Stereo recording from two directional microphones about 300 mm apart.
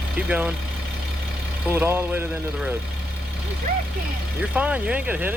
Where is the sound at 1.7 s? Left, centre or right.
Centre.